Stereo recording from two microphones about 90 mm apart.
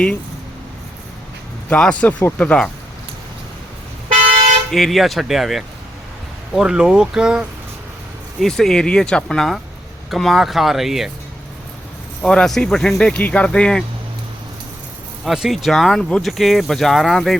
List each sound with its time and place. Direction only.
1.7 s speech: 15° left (ahead or behind)
4.7 s speech: centre (ahead or behind)
8.4 s speech: 5° left (ahead or behind)
12.2 s speech: 5° left (ahead or behind)
15.2 s speech: 5° right (ahead or behind)